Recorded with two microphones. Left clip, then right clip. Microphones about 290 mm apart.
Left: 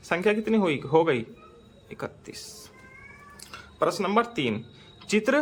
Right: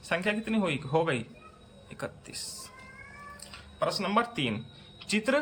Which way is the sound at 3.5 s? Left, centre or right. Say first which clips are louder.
Left 5 dB; centre.